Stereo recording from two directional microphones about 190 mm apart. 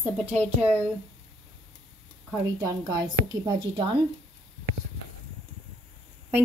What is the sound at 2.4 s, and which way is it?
A woman's voice, 20° right (ahead or behind).